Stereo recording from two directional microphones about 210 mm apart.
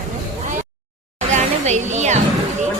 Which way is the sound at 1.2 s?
35° right (ahead or behind).